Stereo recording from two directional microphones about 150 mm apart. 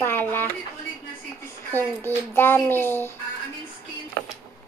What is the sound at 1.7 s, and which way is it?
Speech, 15° left (ahead or behind).